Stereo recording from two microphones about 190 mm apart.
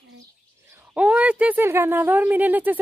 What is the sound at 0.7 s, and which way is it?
A woman's voice, 10° right (ahead or behind).